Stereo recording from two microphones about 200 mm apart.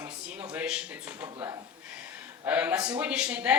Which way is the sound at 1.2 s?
15° right (ahead or behind).